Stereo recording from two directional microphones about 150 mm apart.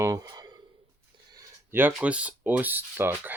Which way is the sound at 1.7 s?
10° right (ahead or behind).